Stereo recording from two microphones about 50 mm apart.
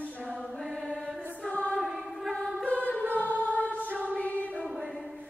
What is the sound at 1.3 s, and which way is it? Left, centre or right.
Choir, left.